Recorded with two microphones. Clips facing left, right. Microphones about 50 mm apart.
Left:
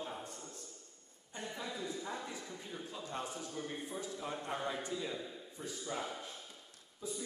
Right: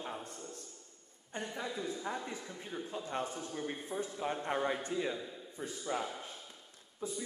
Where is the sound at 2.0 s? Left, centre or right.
Right.